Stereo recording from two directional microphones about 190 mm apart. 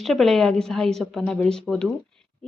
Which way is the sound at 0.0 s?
Centre (ahead or behind).